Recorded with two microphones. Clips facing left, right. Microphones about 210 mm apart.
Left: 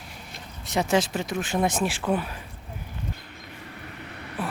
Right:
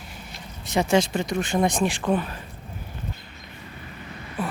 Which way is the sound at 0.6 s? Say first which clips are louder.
Right 2 dB; centre (ahead or behind).